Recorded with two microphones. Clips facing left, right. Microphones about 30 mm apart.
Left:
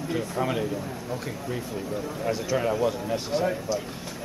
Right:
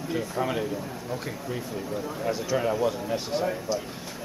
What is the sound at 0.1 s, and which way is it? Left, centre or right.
Speech, centre.